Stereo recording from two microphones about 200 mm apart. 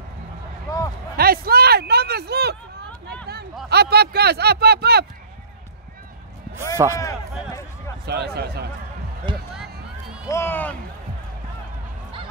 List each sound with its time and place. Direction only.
0.7 s a sound: 15° left (ahead or behind)
1.1 s speech: 50° right (ahead or behind)
3.6 s speech: 55° right (ahead or behind)
6.8 s speech: 15° right (ahead or behind)
8.0 s speech: 55° right (ahead or behind)
9.3 s speech: 25° right (ahead or behind)
10.2 s speech: 15° left (ahead or behind)